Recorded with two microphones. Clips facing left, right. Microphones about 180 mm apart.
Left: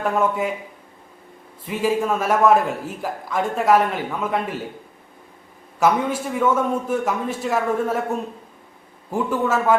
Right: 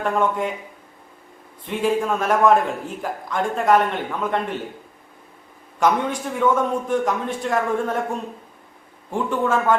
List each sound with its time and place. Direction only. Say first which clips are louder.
0.0 s a man's voice: even; 5° left (ahead or behind)
1.6 s a man's voice: even; 5° left (ahead or behind)
5.8 s a man's voice: left 1 dB; 5° left (ahead or behind)
9.0 s a man's voice: even; 5° left (ahead or behind)